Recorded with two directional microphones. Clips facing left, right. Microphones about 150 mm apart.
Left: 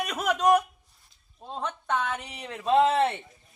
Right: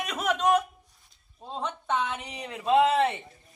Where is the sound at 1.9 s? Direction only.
10° right (ahead or behind).